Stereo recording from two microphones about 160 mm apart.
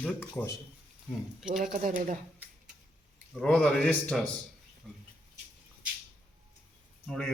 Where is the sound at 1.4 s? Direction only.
Centre (ahead or behind).